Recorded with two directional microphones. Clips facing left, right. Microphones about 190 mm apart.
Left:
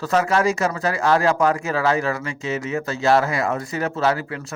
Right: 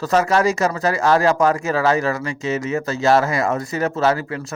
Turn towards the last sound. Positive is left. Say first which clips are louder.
# right 2 dB
turn(degrees=-40)  # may be behind; listen again after turning